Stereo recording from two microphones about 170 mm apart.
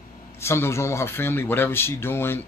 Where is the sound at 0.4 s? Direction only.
15° left (ahead or behind).